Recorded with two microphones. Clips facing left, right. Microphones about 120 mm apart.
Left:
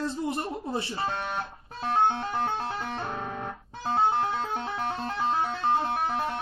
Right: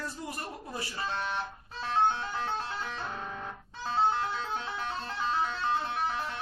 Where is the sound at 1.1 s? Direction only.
50° left (ahead or behind).